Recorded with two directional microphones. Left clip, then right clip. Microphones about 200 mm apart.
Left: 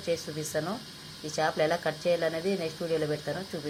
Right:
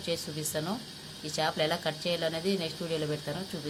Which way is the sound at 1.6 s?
10° right (ahead or behind).